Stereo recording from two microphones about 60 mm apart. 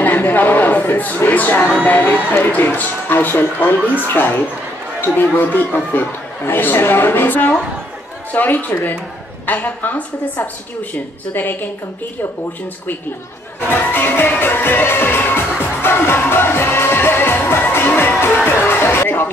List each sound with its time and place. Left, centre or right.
0.0 s a woman's voice: left
13.7 s speech: left
14.4 s music: left